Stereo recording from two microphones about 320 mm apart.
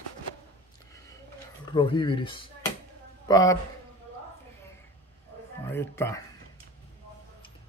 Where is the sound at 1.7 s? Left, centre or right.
Centre.